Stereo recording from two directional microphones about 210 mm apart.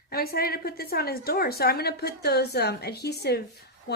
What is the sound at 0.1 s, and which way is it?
Speech, 45° left (ahead or behind).